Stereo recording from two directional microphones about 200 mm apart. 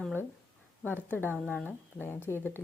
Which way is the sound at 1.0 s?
10° left (ahead or behind).